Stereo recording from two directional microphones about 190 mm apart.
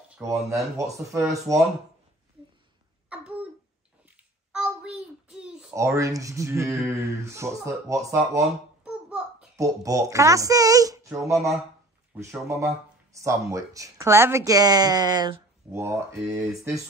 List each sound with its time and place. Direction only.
0.1 s speech: 15° right (ahead or behind)
3.1 s cough: 5° right (ahead or behind)
4.5 s child singing: 5° right (ahead or behind)
5.8 s speech: 15° right (ahead or behind)
8.8 s a sound: 5° right (ahead or behind)
9.6 s speech: 15° right (ahead or behind)